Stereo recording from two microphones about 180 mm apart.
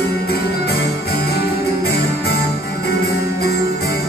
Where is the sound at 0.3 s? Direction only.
60° left (ahead or behind).